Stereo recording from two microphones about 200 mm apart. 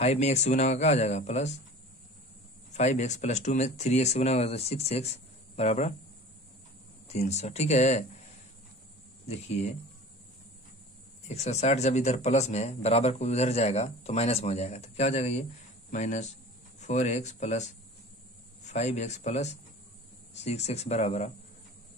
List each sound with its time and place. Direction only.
0.0 s speech: 35° left (ahead or behind)
2.7 s speech: 35° left (ahead or behind)
7.1 s speech: 35° left (ahead or behind)
11.2 s speech: 35° left (ahead or behind)